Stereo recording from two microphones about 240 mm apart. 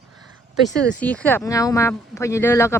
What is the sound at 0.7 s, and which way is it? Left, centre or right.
Speech, centre.